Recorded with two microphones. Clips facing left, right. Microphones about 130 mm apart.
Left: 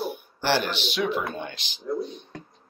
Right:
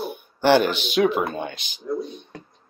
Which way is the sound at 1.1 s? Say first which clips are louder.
Right 4 dB; 50° right (ahead or behind).